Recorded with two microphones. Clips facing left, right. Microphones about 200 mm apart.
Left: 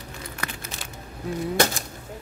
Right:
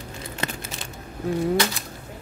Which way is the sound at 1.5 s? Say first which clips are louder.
Even; 45° left (ahead or behind).